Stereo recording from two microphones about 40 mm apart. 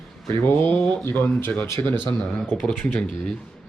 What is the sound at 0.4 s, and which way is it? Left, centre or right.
Speech, left.